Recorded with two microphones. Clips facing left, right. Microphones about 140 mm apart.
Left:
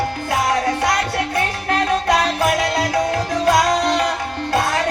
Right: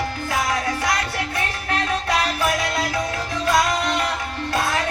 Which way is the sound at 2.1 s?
35° left (ahead or behind).